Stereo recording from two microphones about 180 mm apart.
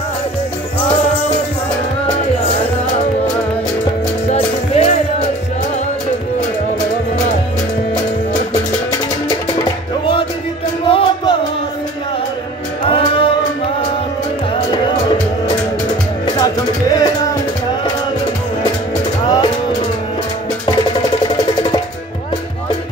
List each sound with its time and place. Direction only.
4.3 s music: 35° left (ahead or behind)
10.9 s music: 30° left (ahead or behind)
12.9 s music: 30° left (ahead or behind)
16.3 s music: 20° left (ahead or behind)